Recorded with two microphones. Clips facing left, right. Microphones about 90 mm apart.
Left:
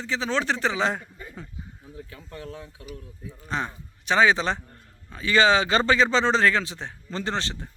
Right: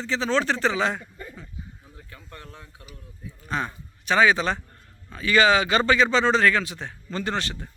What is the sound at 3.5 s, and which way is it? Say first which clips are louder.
A man's voice: right 1 dB; 20° left (ahead or behind).